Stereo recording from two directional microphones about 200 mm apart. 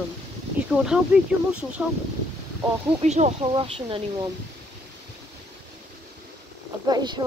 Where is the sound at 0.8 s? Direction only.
5° right (ahead or behind).